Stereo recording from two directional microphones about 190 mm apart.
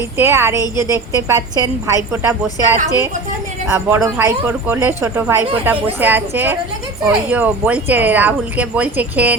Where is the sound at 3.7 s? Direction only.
15° right (ahead or behind).